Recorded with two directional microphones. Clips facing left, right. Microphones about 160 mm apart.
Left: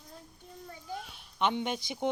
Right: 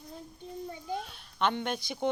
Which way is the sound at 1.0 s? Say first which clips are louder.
Left 1 dB; 15° left (ahead or behind).